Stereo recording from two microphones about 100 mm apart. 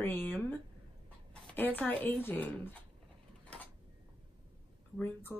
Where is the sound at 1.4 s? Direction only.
15° left (ahead or behind).